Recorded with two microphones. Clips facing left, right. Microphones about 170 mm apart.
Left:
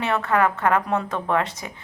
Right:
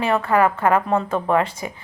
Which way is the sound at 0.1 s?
5° right (ahead or behind).